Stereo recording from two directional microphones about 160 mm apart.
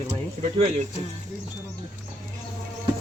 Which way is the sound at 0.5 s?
40° right (ahead or behind).